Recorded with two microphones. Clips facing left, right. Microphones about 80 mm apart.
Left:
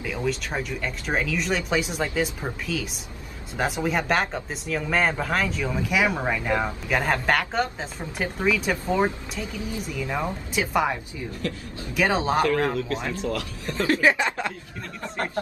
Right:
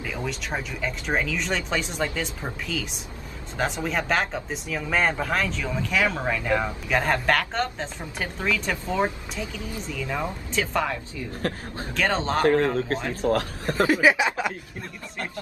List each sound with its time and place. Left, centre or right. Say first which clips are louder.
0.0 s a sound: left 4 dB; centre
0.6 s a woman's voice: left 1 dB; centre
6.9 s a woman's voice: right 1 dB; centre
11.4 s speech: right 2 dB; right
11.9 s a woman's voice: left 2 dB; centre
12.7 s speech: right 1 dB; right
13.8 s a sound: even; centre